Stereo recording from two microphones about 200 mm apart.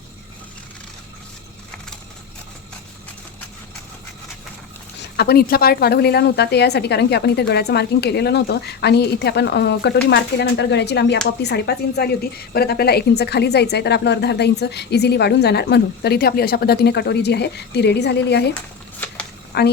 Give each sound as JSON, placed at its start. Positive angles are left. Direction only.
{"t": 5.1, "sound": "a woman's voice", "side_deg": 55}
{"t": 18.9, "sound": "a sound", "side_deg": 5}
{"t": 19.5, "sound": "speech", "side_deg": 55}